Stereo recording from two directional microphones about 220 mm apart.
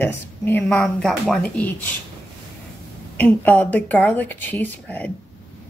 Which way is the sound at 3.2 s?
5° left (ahead or behind).